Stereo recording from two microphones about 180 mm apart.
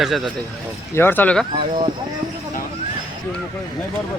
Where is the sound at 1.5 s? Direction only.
30° right (ahead or behind).